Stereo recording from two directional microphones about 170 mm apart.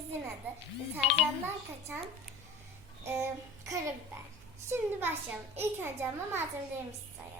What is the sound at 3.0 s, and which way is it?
A child's voice, 15° right (ahead or behind).